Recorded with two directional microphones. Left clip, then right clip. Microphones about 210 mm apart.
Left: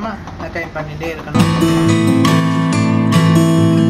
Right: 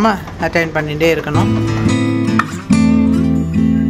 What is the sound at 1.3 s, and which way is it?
Music, centre (ahead or behind).